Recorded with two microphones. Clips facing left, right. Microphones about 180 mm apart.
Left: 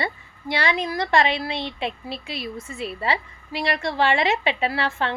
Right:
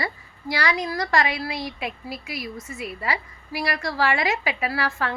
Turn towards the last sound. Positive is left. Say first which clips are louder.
# left 2 dB
turn(degrees=25)  # may be behind; listen again after turning